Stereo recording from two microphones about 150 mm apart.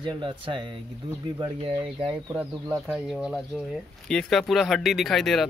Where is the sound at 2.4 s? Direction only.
10° right (ahead or behind).